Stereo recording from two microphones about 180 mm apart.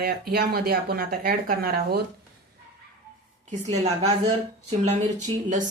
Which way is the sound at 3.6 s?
35° right (ahead or behind).